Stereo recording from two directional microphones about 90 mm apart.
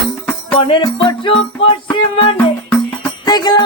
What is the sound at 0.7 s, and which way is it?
Music, 70° left (ahead or behind).